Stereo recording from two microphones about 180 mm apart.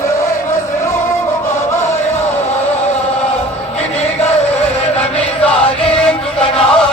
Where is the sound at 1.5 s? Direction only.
15° left (ahead or behind).